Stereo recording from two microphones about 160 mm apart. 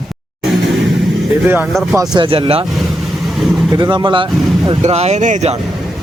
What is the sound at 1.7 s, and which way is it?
Speech, centre (ahead or behind).